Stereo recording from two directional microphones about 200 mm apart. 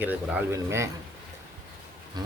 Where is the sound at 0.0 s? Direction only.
10° right (ahead or behind).